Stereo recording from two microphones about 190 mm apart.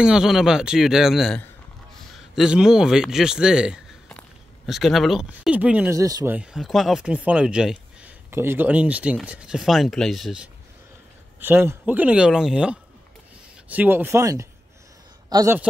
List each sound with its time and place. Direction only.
0.0 s a man's voice: 5° right (ahead or behind)
6.3 s a man's voice: 5° right (ahead or behind)